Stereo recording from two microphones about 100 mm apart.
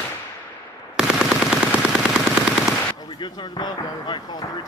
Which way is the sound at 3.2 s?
50° left (ahead or behind).